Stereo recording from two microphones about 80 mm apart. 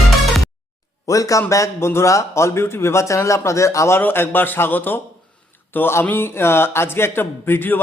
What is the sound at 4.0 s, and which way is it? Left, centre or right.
A man's voice, left.